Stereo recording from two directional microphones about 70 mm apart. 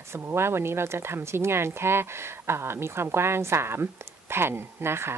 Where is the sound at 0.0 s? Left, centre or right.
Right.